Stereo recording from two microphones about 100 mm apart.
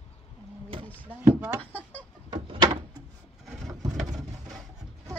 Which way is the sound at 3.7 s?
40° right (ahead or behind).